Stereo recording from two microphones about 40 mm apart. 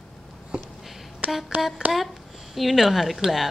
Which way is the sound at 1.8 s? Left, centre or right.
Right.